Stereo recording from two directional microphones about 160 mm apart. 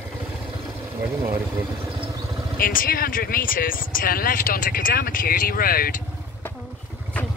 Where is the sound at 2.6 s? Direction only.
65° left (ahead or behind).